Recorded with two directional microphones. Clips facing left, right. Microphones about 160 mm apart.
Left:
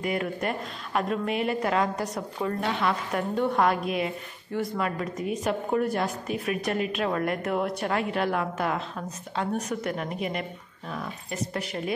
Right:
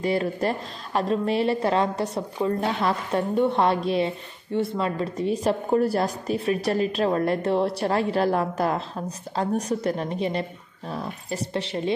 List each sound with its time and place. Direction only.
0.0 s a woman's voice: 30° right (ahead or behind)